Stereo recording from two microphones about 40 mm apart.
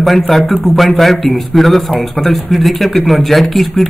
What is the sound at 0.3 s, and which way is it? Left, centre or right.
Speech, centre.